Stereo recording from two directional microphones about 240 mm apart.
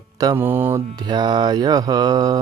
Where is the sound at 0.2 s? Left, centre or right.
Centre.